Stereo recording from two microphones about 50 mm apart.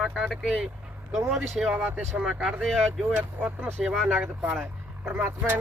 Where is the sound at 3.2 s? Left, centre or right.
Right.